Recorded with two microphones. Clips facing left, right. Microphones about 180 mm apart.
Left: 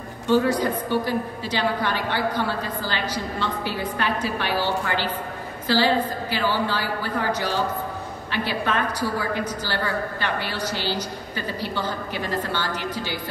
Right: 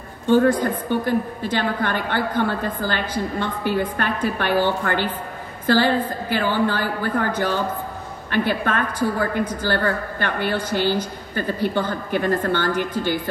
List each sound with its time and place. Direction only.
0.3 s a woman's voice: 50° right (ahead or behind)